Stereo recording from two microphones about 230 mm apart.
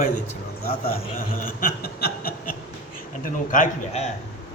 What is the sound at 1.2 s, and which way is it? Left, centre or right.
Chuckle, left.